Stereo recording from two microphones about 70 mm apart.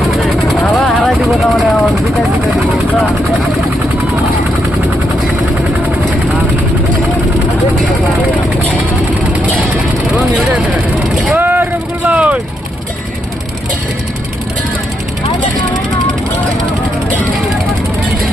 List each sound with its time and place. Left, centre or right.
0.2 s vehicle: centre
10.2 s vehicle: right